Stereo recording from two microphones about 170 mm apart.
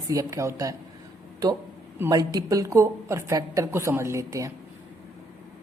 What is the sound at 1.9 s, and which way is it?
A woman's voice, 15° right (ahead or behind).